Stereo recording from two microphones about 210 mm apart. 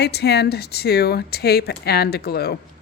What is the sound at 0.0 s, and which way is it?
Speech, 50° left (ahead or behind).